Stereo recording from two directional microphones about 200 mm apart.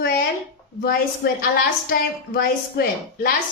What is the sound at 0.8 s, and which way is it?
A woman's voice, 50° left (ahead or behind).